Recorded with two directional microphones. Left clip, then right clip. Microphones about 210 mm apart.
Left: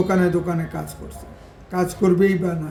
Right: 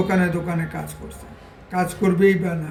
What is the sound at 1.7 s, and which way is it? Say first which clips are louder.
Speech: left 2 dB; 15° left (ahead or behind).